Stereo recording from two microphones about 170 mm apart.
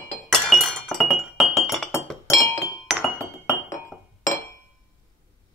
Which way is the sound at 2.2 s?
15° left (ahead or behind).